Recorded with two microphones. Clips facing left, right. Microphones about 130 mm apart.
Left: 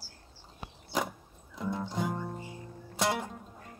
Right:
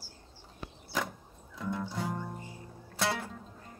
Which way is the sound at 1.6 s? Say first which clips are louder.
Left 2 dB; 15° left (ahead or behind).